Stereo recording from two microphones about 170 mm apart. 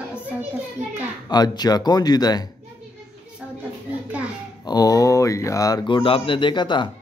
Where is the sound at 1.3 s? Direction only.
25° left (ahead or behind).